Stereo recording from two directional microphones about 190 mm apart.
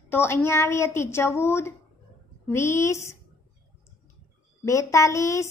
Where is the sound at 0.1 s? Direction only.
10° left (ahead or behind).